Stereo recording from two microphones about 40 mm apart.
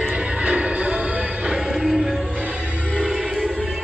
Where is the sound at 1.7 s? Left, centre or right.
Centre.